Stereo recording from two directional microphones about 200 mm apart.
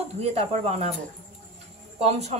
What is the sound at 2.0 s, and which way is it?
Speech, 35° right (ahead or behind).